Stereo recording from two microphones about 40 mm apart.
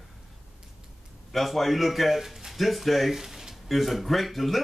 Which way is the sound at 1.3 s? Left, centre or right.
Centre.